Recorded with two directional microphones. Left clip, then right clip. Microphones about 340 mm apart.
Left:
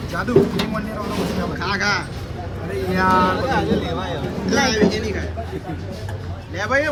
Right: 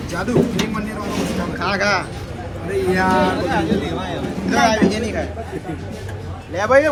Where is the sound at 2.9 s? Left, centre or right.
Centre.